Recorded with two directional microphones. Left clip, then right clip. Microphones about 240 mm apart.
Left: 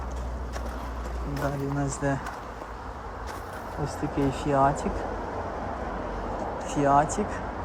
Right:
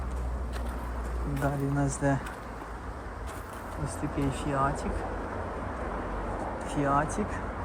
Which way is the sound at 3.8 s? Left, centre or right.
Left.